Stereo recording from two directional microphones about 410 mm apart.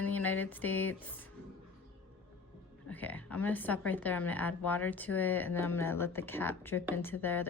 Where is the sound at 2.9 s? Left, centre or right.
Centre.